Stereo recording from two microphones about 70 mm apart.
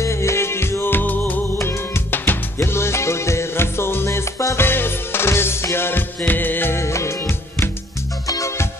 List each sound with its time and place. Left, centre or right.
0.0 s music: left
1.6 s music: left
4.6 s music: left